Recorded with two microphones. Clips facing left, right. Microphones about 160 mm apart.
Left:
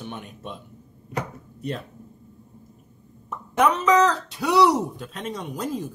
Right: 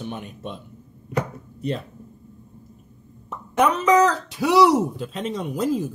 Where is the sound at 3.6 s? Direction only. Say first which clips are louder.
Right 1 dB; 5° right (ahead or behind).